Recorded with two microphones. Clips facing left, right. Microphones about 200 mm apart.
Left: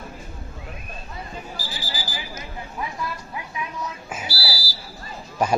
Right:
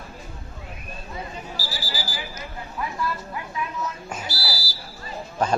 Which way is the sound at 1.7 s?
20° left (ahead or behind).